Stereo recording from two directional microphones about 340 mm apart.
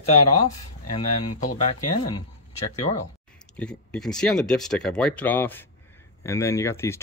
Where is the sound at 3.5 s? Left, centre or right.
Centre.